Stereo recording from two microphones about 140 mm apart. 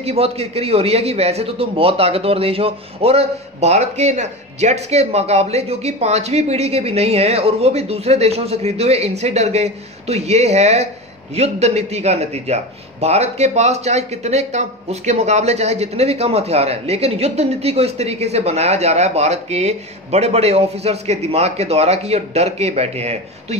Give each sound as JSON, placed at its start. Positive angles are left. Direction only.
{"t": 0.0, "sound": "a man's voice", "side_deg": -45}